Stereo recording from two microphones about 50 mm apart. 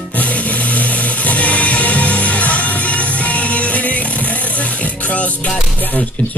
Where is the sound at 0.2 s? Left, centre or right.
Left.